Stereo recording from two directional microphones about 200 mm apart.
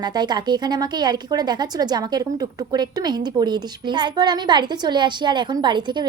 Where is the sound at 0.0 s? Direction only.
20° right (ahead or behind).